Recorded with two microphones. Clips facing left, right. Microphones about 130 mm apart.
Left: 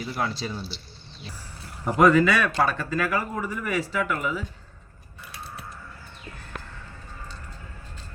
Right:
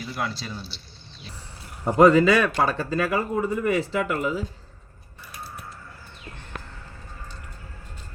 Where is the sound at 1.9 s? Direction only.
30° right (ahead or behind).